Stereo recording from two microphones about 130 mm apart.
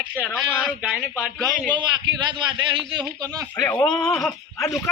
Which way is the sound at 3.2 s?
30° right (ahead or behind).